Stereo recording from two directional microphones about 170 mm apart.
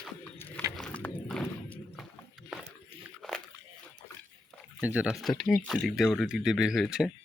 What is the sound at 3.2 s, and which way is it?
Biting, 5° left (ahead or behind).